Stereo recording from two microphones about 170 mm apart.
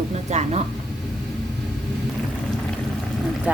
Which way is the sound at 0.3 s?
40° right (ahead or behind).